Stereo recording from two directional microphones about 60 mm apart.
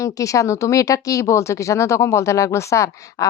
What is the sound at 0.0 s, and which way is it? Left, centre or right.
Speech, left.